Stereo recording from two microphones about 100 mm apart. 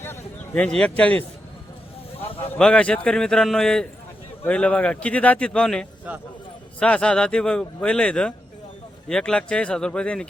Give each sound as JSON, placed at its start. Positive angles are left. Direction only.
{"t": 0.5, "sound": "speech", "side_deg": 10}
{"t": 2.1, "sound": "a sound", "side_deg": 70}
{"t": 2.6, "sound": "speech", "side_deg": 10}
{"t": 6.1, "sound": "speech", "side_deg": -15}
{"t": 6.7, "sound": "speech", "side_deg": 10}